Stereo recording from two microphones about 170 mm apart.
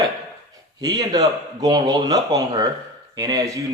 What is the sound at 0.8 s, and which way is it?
Speech, 20° right (ahead or behind).